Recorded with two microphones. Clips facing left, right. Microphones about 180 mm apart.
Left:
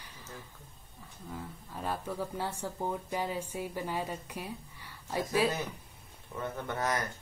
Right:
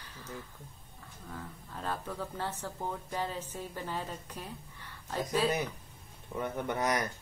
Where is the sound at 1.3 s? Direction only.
10° left (ahead or behind).